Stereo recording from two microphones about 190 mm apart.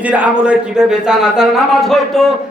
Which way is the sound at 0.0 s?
5° right (ahead or behind).